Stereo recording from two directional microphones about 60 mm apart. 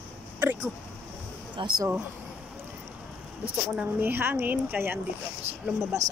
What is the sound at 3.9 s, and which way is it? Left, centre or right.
A woman's voice, right.